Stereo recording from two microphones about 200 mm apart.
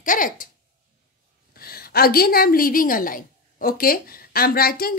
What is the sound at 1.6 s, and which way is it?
A woman's voice, 50° left (ahead or behind).